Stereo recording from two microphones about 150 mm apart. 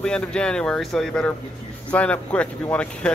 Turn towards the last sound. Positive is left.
turn(degrees=10)  # may be behind; listen again after turning